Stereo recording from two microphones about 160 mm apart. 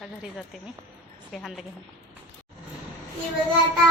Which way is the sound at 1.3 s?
Centre (ahead or behind).